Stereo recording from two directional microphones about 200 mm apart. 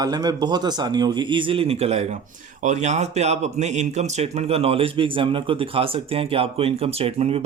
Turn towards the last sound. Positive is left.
turn(degrees=-30)  # may be behind; listen again after turning